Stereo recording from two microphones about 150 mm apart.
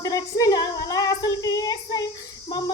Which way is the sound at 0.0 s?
20° left (ahead or behind).